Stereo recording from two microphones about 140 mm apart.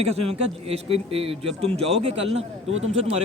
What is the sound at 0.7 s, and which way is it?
A man's voice, 45° right (ahead or behind).